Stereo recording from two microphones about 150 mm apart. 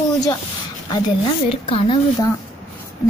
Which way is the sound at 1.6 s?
35° left (ahead or behind).